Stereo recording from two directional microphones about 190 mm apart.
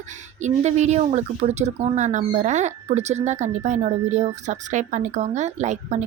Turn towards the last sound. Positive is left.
turn(degrees=-40)  # may be behind; listen again after turning